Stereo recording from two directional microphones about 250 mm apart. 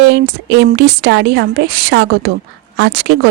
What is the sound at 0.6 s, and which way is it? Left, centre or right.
Speech, right.